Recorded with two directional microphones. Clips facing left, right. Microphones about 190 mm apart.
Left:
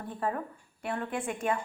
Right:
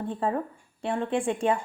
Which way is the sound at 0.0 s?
25° right (ahead or behind).